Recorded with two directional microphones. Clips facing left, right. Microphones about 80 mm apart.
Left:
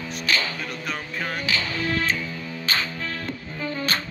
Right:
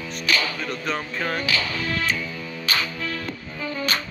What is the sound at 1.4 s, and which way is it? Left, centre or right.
Music, left.